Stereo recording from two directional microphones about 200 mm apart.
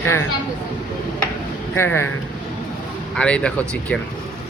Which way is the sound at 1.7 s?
10° left (ahead or behind).